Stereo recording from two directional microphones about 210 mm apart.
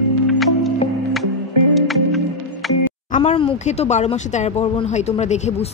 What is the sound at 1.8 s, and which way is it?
Music, centre (ahead or behind).